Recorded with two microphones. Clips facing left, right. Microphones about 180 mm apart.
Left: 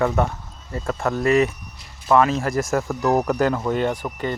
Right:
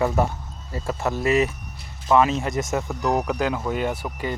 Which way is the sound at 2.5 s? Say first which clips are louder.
Left 3 dB; 20° right (ahead or behind).